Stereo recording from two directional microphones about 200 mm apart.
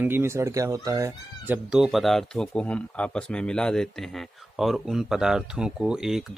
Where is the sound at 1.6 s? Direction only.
5° right (ahead or behind).